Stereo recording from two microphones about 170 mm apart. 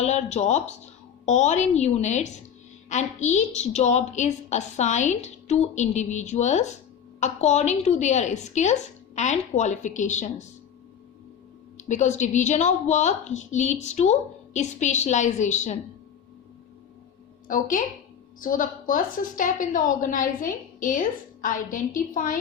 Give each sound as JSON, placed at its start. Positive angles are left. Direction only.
{"t": 0.0, "sound": "a woman's voice", "side_deg": 40}
{"t": 11.8, "sound": "a woman's voice", "side_deg": 45}
{"t": 17.5, "sound": "a woman's voice", "side_deg": 50}